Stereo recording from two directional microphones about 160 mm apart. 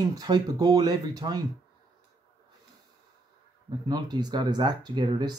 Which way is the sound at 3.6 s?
25° right (ahead or behind).